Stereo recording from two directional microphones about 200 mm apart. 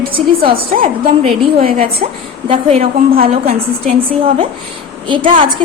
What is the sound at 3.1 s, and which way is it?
Speech, 45° right (ahead or behind).